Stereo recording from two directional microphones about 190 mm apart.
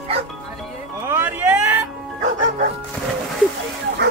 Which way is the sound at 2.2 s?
45° right (ahead or behind).